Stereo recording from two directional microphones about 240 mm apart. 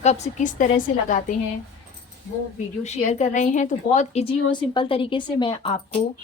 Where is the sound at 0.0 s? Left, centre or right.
Left.